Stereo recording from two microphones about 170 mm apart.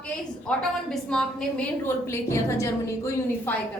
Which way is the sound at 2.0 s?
15° left (ahead or behind).